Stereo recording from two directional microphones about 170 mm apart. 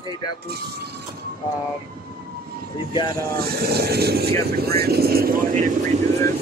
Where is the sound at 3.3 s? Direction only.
65° right (ahead or behind).